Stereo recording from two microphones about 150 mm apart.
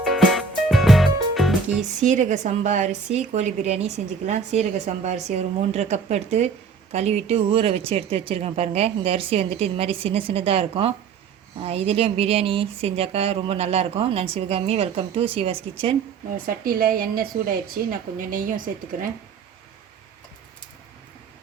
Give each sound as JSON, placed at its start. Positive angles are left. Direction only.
{"t": 0.0, "sound": "music", "side_deg": 0}
{"t": 1.8, "sound": "a woman's voice", "side_deg": -55}
{"t": 16.5, "sound": "a woman's voice", "side_deg": -70}